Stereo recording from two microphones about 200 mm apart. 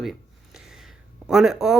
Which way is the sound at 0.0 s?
Centre (ahead or behind).